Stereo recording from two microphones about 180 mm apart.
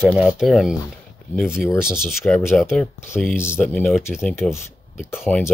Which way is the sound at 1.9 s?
Centre (ahead or behind).